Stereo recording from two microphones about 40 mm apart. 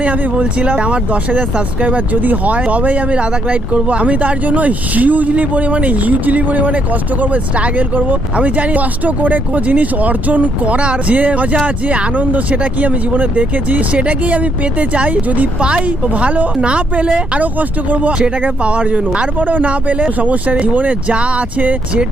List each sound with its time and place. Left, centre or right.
0.0 s speech: right
1.3 s speech: right
15.6 s speech: right
16.6 s speech: right
18.6 s speech: right
19.4 s speech: right